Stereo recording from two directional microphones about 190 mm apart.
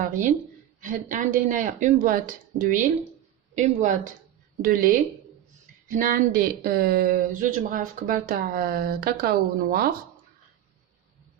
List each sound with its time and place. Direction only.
0.0 s speech: 45° right (ahead or behind)